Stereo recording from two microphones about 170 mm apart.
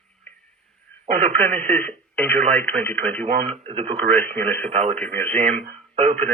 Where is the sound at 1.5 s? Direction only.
40° right (ahead or behind).